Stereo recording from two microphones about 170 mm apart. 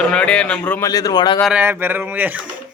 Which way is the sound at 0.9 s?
20° left (ahead or behind).